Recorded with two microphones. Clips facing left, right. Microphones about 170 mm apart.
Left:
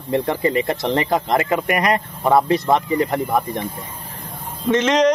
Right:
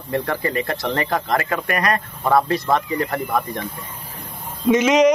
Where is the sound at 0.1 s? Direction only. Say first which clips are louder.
Left 4 dB; 20° left (ahead or behind).